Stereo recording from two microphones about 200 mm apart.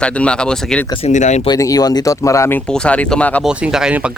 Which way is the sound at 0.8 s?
25° left (ahead or behind).